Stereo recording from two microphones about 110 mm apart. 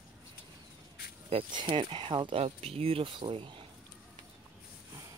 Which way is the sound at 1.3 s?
50° right (ahead or behind).